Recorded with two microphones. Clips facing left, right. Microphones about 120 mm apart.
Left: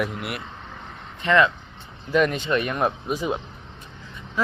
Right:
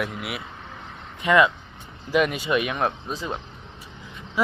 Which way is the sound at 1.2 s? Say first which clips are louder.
Right 1 dB; 10° right (ahead or behind).